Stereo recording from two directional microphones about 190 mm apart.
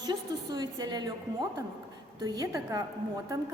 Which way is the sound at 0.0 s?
20° right (ahead or behind).